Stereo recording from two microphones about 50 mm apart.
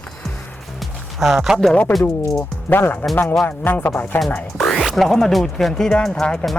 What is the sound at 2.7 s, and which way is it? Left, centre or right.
Speech, left.